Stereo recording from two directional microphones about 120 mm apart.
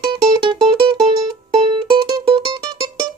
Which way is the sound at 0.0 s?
45° right (ahead or behind).